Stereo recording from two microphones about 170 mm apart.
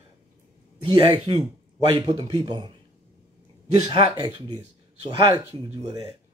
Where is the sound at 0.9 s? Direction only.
25° right (ahead or behind).